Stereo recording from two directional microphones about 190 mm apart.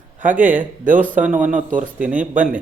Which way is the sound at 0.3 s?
10° right (ahead or behind).